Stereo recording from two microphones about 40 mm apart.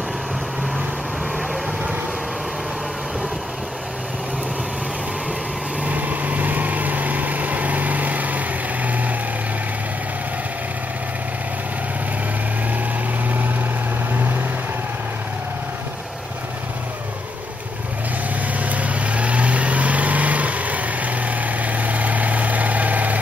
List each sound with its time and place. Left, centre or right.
5.9 s vehicle: right
18.6 s vehicle: right